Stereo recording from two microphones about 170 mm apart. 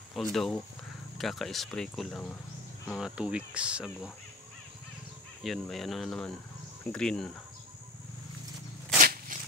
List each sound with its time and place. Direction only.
0.1 s speech: centre (ahead or behind)
5.4 s speech: centre (ahead or behind)
9.3 s a sound: 50° right (ahead or behind)